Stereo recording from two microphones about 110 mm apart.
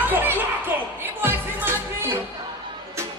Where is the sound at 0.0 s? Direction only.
15° right (ahead or behind).